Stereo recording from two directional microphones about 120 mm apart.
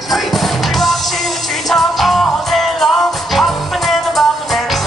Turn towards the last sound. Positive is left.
turn(degrees=0)  # may be behind; listen again after turning